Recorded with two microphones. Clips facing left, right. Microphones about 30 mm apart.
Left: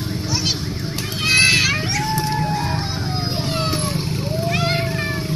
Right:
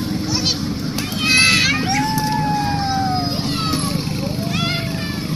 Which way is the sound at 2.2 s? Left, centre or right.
Centre.